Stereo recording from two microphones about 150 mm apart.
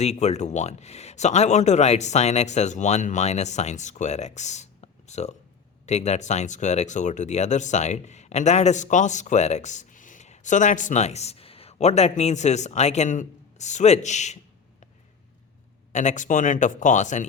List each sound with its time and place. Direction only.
0.0 s speech: 45° left (ahead or behind)
15.9 s speech: 55° left (ahead or behind)